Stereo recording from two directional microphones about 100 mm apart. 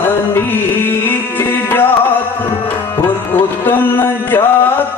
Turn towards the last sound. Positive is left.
turn(degrees=20)  # may be behind; listen again after turning